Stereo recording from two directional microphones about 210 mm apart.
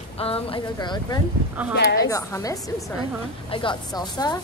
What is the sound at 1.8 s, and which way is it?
Speech, 50° left (ahead or behind).